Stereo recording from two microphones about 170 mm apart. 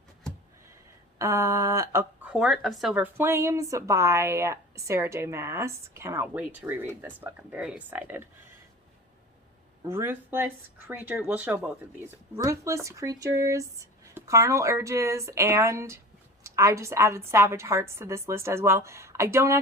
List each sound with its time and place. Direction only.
1.2 s speech: 15° right (ahead or behind)
2.3 s speech: centre (ahead or behind)
9.8 s speech: 15° right (ahead or behind)